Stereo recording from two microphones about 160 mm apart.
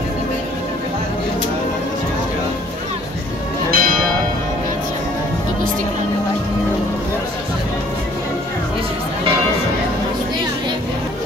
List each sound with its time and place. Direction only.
3.7 s church bell: 60° right (ahead or behind)